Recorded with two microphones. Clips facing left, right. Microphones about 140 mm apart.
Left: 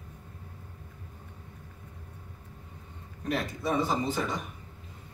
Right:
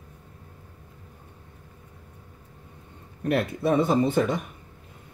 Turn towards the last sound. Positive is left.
turn(degrees=-60)  # may be behind; listen again after turning